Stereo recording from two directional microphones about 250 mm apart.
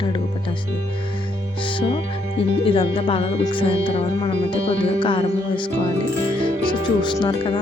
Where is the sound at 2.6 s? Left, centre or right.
Left.